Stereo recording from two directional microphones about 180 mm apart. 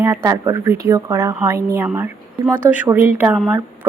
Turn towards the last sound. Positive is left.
turn(degrees=-10)  # may be behind; listen again after turning